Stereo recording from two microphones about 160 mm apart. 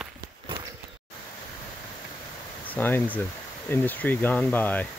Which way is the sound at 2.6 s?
10° left (ahead or behind).